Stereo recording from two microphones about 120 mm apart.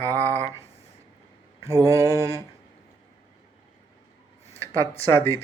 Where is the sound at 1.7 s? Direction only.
30° right (ahead or behind).